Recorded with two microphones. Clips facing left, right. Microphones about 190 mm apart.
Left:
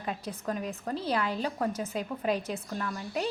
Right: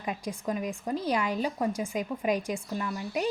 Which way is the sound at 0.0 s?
10° right (ahead or behind).